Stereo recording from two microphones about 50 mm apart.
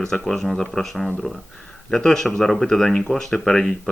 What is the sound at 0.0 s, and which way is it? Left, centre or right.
Speech, centre.